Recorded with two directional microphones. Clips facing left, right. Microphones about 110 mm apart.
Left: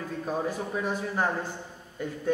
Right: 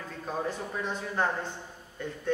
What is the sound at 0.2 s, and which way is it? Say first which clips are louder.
Speech: left 2 dB; 10° left (ahead or behind).